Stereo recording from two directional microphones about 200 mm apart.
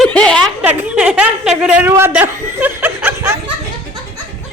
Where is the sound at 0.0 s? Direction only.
5° left (ahead or behind).